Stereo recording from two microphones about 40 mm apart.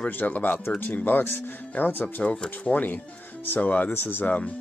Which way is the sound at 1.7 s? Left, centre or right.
Left.